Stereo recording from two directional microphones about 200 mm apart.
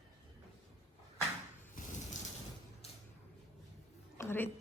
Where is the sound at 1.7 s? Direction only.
40° left (ahead or behind).